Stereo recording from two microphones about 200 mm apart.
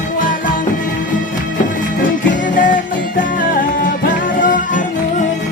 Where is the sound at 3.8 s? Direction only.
40° left (ahead or behind).